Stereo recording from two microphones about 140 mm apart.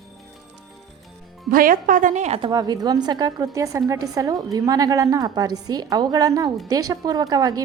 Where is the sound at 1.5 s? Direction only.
85° right; by 2.4 s 55° right (ahead or behind).